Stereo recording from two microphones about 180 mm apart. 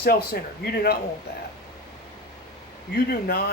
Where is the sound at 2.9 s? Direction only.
60° left (ahead or behind).